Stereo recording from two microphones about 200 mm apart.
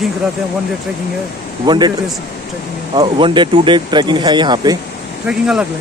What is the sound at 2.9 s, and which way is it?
Speech, 25° right (ahead or behind).